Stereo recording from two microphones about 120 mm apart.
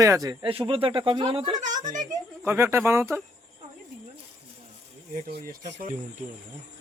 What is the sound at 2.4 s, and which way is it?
Speech, 20° right (ahead or behind).